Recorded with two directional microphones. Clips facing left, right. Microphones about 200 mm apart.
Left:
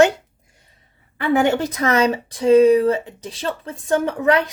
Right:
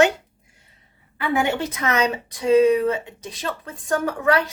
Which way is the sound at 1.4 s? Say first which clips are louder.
Left 5 dB; 35° left (ahead or behind).